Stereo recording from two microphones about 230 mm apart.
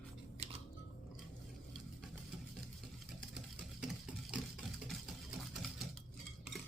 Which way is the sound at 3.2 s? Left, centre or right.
Centre.